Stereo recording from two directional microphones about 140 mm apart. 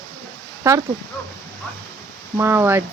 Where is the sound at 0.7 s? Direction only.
20° right (ahead or behind).